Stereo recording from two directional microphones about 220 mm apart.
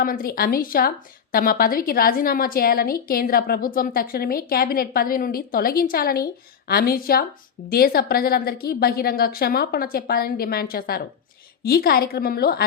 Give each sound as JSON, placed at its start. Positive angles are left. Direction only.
{"t": 0.0, "sound": "a woman's voice", "side_deg": 40}